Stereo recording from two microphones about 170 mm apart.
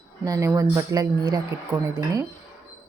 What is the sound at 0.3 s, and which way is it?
A woman's voice, 20° right (ahead or behind).